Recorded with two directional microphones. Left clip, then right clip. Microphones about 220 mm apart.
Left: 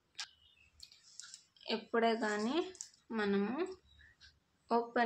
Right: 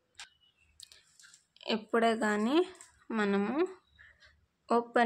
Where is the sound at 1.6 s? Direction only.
50° right (ahead or behind).